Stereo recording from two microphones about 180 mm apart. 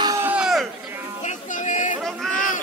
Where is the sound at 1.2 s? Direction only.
45° left (ahead or behind).